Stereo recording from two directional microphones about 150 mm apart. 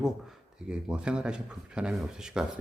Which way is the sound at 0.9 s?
5° right (ahead or behind).